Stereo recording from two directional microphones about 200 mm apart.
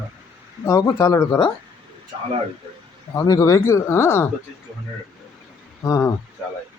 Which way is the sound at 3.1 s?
15° left (ahead or behind).